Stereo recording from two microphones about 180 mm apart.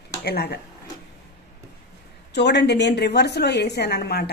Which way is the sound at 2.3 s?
70° left (ahead or behind).